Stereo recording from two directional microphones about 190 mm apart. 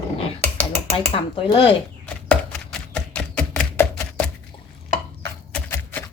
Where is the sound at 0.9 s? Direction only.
30° left (ahead or behind).